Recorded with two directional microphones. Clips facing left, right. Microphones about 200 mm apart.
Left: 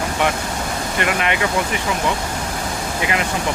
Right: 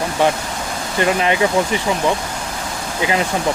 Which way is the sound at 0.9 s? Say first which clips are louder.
Right 5 dB; 30° right (ahead or behind).